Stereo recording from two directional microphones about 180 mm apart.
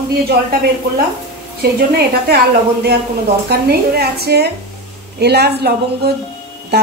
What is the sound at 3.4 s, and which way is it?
Speech, 60° right (ahead or behind).